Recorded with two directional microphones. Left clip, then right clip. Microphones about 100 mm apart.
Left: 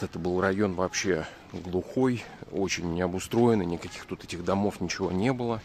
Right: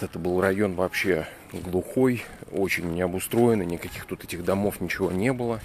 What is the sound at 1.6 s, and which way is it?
Speech, centre (ahead or behind).